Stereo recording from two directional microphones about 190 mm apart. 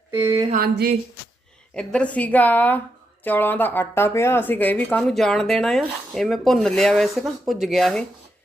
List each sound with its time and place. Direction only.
0.1 s a sound: 15° right (ahead or behind)
0.5 s speech: 50° right (ahead or behind)
1.7 s a woman's voice: 5° left (ahead or behind)